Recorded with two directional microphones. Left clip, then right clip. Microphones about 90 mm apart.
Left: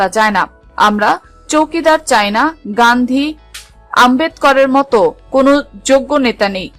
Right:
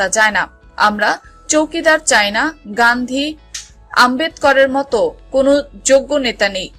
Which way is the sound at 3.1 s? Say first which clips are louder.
Left 3 dB; 35° left (ahead or behind).